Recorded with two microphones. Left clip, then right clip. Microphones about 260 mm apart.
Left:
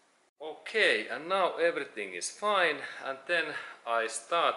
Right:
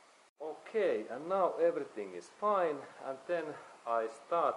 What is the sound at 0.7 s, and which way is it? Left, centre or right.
Speech, centre.